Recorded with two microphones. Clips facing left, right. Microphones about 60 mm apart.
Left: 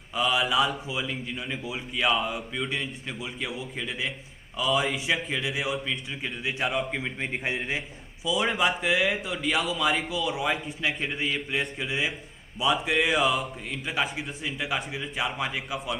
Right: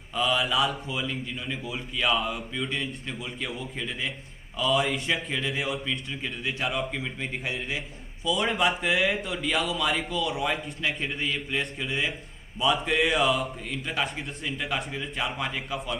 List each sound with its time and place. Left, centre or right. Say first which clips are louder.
0.1 s a man's voice: left 1 dB; centre
6.9 s a man's voice: left 2 dB; left
8.3 s a man's voice: even; centre